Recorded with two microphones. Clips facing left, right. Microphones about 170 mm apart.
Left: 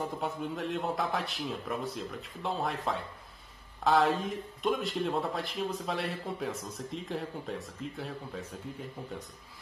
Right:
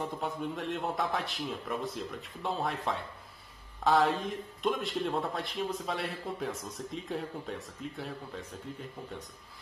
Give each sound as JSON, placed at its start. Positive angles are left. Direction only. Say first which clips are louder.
{"t": 0.0, "sound": "speech", "louder": "even", "side_deg": 0}